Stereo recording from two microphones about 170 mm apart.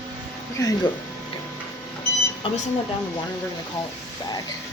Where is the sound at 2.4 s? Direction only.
30° left (ahead or behind).